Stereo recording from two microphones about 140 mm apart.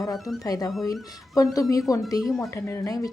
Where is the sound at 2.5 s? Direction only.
20° left (ahead or behind).